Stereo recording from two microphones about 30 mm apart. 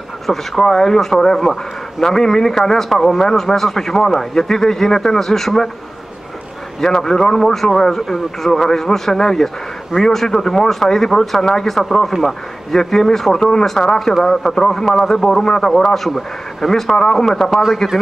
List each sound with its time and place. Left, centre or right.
0.3 s speech: centre
2.9 s speech: centre
6.8 s speech: centre
11.8 s speech: centre
16.1 s speech: centre
16.9 s speech: centre
17.5 s a man's voice: centre